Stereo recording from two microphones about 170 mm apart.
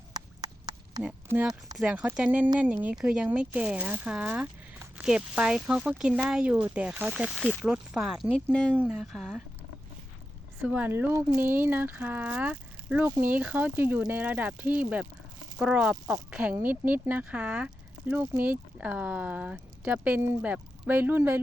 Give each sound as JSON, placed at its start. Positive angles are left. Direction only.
{"t": 0.1, "sound": "a sound", "side_deg": -20}
{"t": 1.0, "sound": "speech", "side_deg": -5}
{"t": 10.6, "sound": "speech", "side_deg": -10}